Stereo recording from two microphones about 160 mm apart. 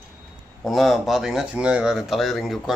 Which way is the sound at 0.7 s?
Centre (ahead or behind).